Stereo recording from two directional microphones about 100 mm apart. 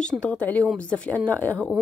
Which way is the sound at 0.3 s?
15° left (ahead or behind).